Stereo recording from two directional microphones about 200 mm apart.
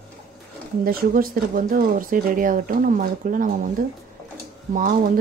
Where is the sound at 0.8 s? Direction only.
45° right (ahead or behind).